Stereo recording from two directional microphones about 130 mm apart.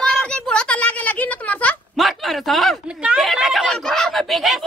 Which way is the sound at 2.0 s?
Centre (ahead or behind).